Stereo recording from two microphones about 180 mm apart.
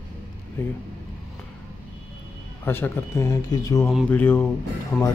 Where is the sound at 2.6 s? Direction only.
10° left (ahead or behind).